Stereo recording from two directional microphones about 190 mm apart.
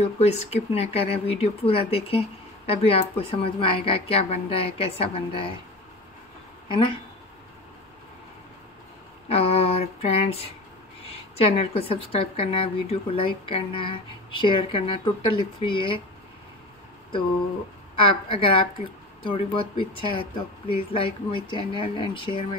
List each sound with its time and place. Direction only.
0.2 s speech: 35° left (ahead or behind)
6.7 s a woman's voice: 25° left (ahead or behind)
9.3 s a woman's voice: 30° left (ahead or behind)
17.9 s a woman's voice: 25° left (ahead or behind)